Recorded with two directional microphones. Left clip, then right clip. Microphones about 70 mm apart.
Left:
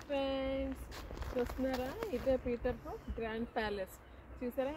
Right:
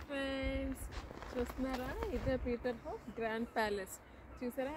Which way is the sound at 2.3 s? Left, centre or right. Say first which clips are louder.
Left 2 dB; centre.